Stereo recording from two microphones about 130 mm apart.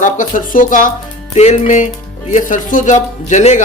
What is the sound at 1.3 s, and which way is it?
Speech, 65° left (ahead or behind).